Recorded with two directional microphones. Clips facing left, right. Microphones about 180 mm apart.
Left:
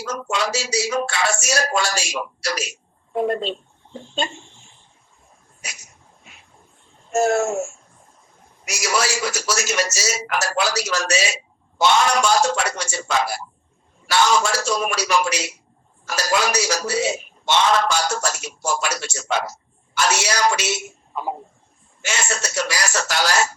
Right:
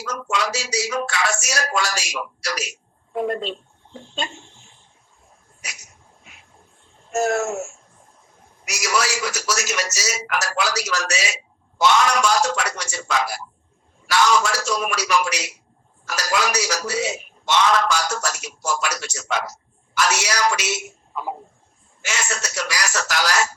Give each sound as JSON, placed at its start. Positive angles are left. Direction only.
{"t": 0.0, "sound": "a man's voice", "side_deg": 30}
{"t": 5.6, "sound": "dog", "side_deg": 30}
{"t": 7.1, "sound": "a man's voice", "side_deg": 30}
{"t": 8.6, "sound": "a man's voice", "side_deg": 30}
{"t": 22.0, "sound": "a man's voice", "side_deg": 30}